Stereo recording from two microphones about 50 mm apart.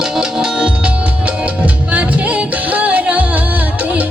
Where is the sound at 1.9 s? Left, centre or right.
Right.